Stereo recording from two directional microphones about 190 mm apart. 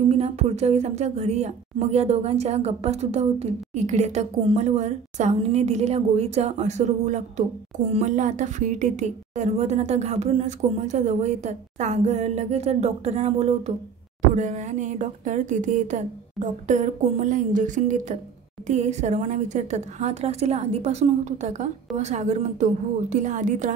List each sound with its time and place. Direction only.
0.1 s a woman's voice: 35° right (ahead or behind)